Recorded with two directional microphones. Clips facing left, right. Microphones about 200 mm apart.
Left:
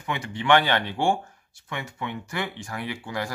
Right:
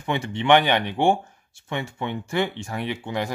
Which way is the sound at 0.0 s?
25° right (ahead or behind).